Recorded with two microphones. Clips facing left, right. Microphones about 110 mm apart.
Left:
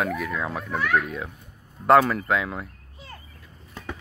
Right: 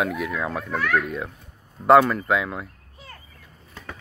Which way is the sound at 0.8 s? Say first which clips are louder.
Even; 10° left (ahead or behind).